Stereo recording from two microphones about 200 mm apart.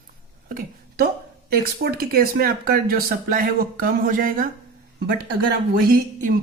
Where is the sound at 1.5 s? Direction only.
50° right (ahead or behind).